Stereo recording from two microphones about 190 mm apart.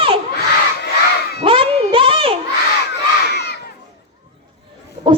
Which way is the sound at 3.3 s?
60° left (ahead or behind).